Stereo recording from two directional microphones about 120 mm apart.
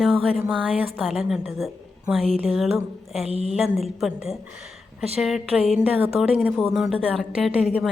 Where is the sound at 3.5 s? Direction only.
Centre (ahead or behind).